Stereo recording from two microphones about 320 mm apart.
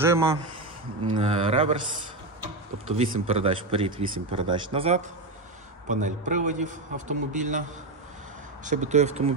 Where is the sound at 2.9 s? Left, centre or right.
Centre.